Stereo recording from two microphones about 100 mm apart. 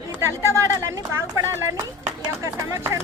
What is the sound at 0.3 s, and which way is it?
Speech, 30° right (ahead or behind).